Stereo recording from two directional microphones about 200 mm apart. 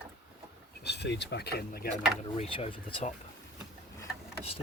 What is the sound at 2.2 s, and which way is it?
Speech, 30° left (ahead or behind).